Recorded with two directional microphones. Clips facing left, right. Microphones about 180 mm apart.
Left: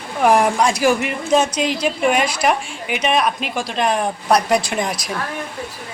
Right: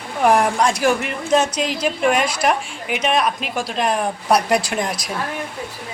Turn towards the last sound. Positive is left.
turn(degrees=0)  # may be behind; listen again after turning